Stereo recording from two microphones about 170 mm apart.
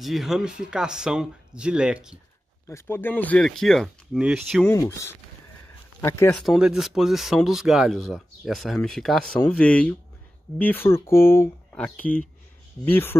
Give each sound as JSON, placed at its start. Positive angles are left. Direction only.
{"t": 0.0, "sound": "speech", "side_deg": 0}
{"t": 2.7, "sound": "speech", "side_deg": 15}
{"t": 4.6, "sound": "speech", "side_deg": 15}
{"t": 6.3, "sound": "speech", "side_deg": 0}